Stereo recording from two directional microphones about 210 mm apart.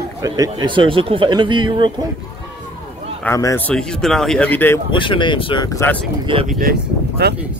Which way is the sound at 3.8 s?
5° left (ahead or behind).